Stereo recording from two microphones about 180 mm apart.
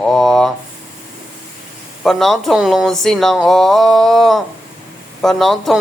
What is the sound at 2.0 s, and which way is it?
Speech, centre (ahead or behind).